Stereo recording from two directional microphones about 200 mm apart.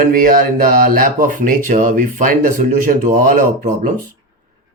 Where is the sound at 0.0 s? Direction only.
45° right (ahead or behind).